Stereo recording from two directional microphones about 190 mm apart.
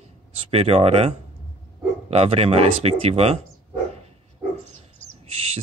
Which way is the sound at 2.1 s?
35° right (ahead or behind).